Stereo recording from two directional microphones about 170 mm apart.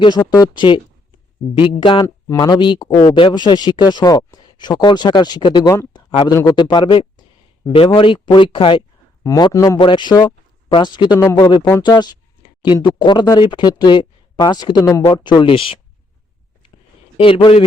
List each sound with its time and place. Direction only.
0.0 s speech: 25° left (ahead or behind)
11.2 s speech: 15° left (ahead or behind)
11.8 s speech: 25° left (ahead or behind)
17.2 s speech: 30° left (ahead or behind)